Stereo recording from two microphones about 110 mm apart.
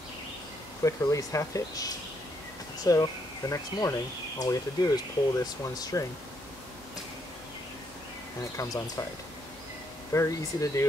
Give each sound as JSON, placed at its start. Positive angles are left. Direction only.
{"t": 0.8, "sound": "speech", "side_deg": 30}
{"t": 10.1, "sound": "speech", "side_deg": 30}